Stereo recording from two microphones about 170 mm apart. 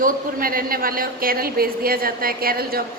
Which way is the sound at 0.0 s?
55° right (ahead or behind).